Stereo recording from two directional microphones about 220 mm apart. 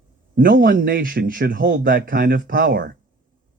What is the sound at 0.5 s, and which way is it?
Speech, 40° right (ahead or behind).